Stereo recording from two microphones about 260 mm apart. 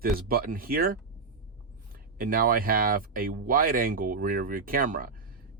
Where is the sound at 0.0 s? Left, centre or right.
Right.